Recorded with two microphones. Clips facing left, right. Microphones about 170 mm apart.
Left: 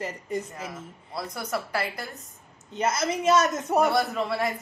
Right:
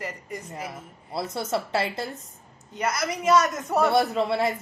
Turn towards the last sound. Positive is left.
turn(degrees=-20)  # may be behind; listen again after turning